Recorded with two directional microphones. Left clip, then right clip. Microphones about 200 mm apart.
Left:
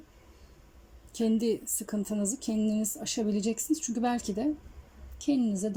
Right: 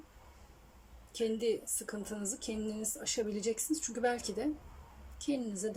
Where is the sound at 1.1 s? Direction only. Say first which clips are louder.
Left 4 dB; 20° left (ahead or behind).